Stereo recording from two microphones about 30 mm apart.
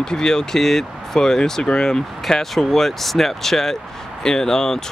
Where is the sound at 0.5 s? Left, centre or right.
Centre.